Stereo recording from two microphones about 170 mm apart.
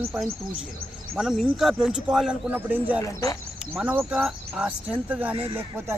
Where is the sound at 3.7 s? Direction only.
10° right (ahead or behind).